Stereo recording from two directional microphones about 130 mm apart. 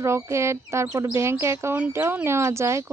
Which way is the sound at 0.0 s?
20° right (ahead or behind).